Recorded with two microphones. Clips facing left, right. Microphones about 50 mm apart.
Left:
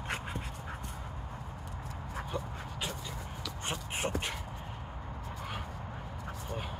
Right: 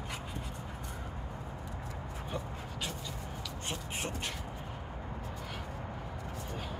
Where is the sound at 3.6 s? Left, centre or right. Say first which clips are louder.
Left 4 dB; left.